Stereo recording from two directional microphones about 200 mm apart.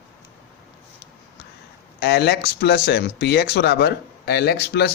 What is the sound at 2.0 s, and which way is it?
A man's voice, 55° left (ahead or behind).